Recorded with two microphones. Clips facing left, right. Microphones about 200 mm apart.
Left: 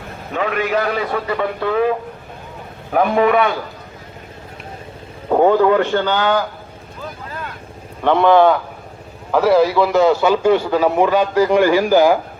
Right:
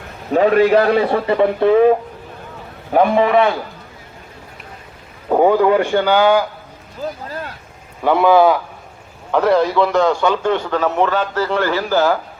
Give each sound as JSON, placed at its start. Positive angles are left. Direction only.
{"t": 0.3, "sound": "a man's voice", "side_deg": -35}
{"t": 2.9, "sound": "a man's voice", "side_deg": -30}
{"t": 5.3, "sound": "speech", "side_deg": -10}
{"t": 7.0, "sound": "speech", "side_deg": -35}
{"t": 8.0, "sound": "a man's voice", "side_deg": -5}